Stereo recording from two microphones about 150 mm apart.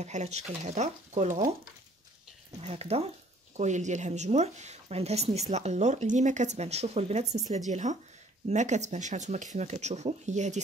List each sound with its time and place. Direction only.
0.0 s speech: 50° right (ahead or behind)
2.6 s speech: 45° right (ahead or behind)